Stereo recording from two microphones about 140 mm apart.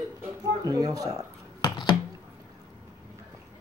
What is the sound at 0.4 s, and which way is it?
Speech, 25° right (ahead or behind).